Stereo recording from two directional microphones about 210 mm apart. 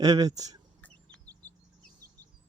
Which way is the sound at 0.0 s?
20° right (ahead or behind).